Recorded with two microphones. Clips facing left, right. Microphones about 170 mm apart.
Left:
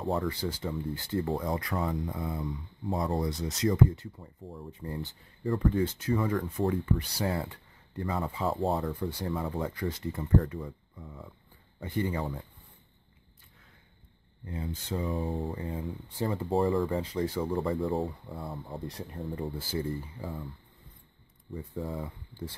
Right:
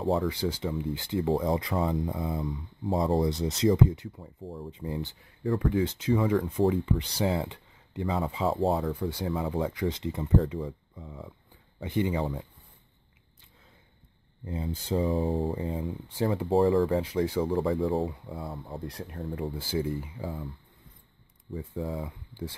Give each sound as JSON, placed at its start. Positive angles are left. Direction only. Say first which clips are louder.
{"t": 0.0, "sound": "speech", "louder": "right 4 dB", "side_deg": 0}
{"t": 0.3, "sound": "speech", "louder": "right 3 dB", "side_deg": -15}
{"t": 5.4, "sound": "speech", "louder": "right 1 dB", "side_deg": 0}
{"t": 5.9, "sound": "speech", "louder": "right 4 dB", "side_deg": -20}
{"t": 8.5, "sound": "speech", "louder": "right 3 dB", "side_deg": 0}
{"t": 14.4, "sound": "speech", "louder": "right 3 dB", "side_deg": -25}
{"t": 16.2, "sound": "speech", "louder": "right 4 dB", "side_deg": -5}
{"t": 17.0, "sound": "speech", "louder": "right 3 dB", "side_deg": -10}
{"t": 17.4, "sound": "speech", "louder": "right 3 dB", "side_deg": 0}
{"t": 19.5, "sound": "speech", "louder": "right 3 dB", "side_deg": -15}
{"t": 21.5, "sound": "speech", "louder": "right 2 dB", "side_deg": 0}
{"t": 22.0, "sound": "speech", "louder": "right 2 dB", "side_deg": -15}